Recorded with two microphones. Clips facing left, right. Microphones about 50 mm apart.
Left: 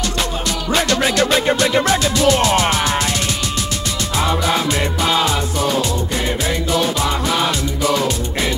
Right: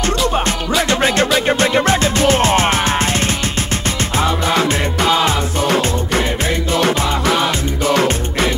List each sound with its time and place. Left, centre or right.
0.0 s music: right
7.9 s music: right